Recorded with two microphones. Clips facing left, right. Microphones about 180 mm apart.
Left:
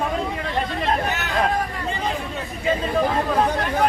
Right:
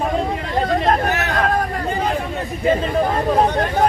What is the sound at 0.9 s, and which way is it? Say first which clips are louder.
Speech: right 5 dB; 60° right (ahead or behind).